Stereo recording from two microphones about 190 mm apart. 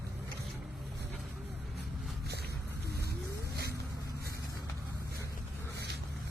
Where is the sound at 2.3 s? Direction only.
60° right (ahead or behind).